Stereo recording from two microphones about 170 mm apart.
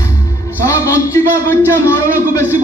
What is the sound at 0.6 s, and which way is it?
A man's voice, 15° left (ahead or behind).